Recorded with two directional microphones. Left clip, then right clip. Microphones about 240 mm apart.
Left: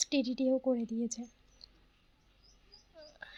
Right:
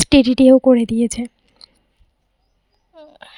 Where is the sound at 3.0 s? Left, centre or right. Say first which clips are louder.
Right 11 dB; right.